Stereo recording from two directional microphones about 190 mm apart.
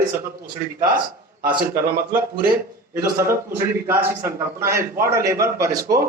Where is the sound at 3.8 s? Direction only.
10° right (ahead or behind).